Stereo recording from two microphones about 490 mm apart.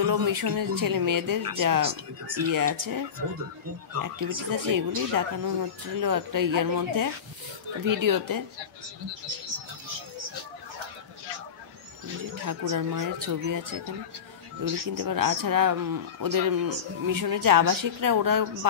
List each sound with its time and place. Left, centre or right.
0.0 s speech: right
12.4 s speech: right